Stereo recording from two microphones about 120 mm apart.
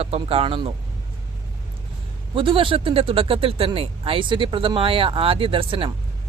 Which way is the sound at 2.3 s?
45° right (ahead or behind).